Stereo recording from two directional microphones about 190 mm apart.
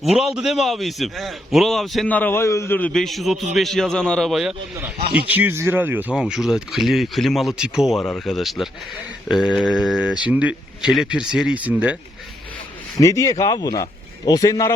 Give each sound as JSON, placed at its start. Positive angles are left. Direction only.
{"t": 0.0, "sound": "speech", "side_deg": 0}
{"t": 13.0, "sound": "speech", "side_deg": 15}